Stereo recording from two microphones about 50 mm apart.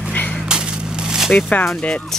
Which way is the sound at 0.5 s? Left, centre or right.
Centre.